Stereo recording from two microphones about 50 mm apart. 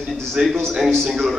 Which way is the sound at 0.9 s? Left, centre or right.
Centre.